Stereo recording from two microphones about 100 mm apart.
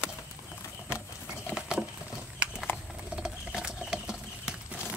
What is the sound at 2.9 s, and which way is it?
Rodents, 10° right (ahead or behind).